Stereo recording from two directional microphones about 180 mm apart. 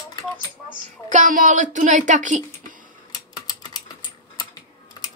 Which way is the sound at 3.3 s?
25° left (ahead or behind).